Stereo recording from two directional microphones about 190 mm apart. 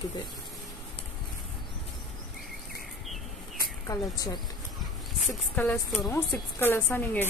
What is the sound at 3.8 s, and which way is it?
Speech, 20° left (ahead or behind).